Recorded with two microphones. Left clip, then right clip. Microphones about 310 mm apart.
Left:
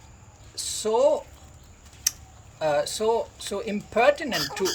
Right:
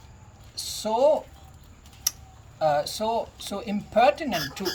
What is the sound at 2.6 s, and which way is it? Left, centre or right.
Speech, centre.